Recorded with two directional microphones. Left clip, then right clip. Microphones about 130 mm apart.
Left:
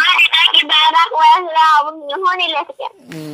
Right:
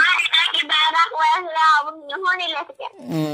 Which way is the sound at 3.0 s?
90° right.